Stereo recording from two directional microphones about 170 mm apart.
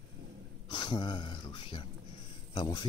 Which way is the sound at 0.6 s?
25° left (ahead or behind).